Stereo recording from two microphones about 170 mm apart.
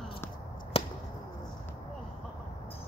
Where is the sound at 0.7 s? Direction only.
35° left (ahead or behind).